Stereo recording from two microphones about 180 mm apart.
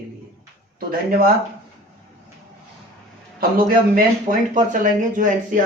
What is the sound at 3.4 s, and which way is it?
Speech, 55° right (ahead or behind).